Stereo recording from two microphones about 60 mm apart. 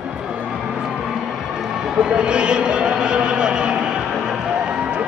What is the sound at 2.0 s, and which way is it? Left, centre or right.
A man's voice, centre.